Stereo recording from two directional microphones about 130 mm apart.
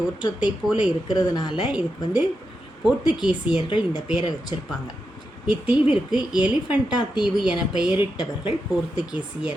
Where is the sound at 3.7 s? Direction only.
35° left (ahead or behind).